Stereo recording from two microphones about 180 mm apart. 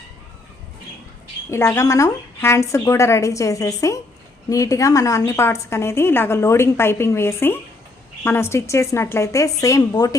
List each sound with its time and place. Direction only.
1.5 s a woman's voice: 15° left (ahead or behind)